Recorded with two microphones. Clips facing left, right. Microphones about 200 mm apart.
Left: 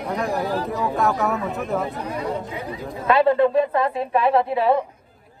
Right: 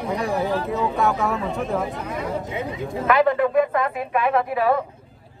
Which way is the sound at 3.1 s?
30° left (ahead or behind).